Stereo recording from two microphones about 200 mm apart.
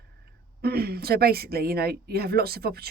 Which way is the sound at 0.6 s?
50° right (ahead or behind).